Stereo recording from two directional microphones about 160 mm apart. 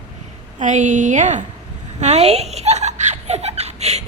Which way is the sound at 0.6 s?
50° right (ahead or behind).